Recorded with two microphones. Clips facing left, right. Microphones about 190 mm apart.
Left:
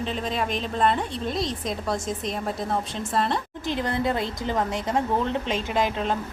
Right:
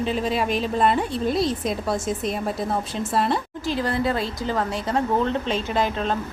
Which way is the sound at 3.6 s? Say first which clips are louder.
Right 1 dB; 20° left (ahead or behind).